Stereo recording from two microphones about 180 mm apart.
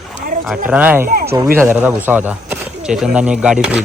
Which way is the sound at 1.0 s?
55° right (ahead or behind).